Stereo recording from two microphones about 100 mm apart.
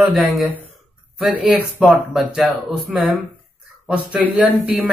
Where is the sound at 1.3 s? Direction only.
15° right (ahead or behind).